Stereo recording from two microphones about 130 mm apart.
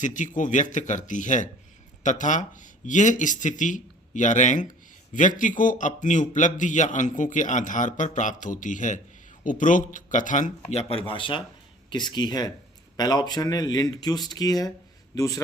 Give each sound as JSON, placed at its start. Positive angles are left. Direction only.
{"t": 0.0, "sound": "a man's voice", "side_deg": 75}
{"t": 5.4, "sound": "a man's voice", "side_deg": 85}
{"t": 10.7, "sound": "a man's voice", "side_deg": 50}